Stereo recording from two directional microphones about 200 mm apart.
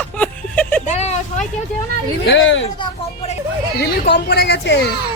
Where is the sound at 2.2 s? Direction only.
65° left (ahead or behind).